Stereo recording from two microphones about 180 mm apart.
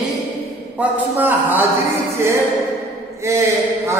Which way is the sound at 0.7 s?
10° right (ahead or behind).